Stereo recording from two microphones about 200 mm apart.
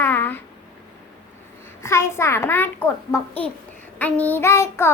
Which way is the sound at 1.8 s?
15° left (ahead or behind).